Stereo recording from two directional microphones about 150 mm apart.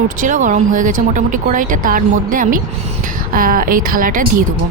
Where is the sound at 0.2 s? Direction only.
60° right (ahead or behind).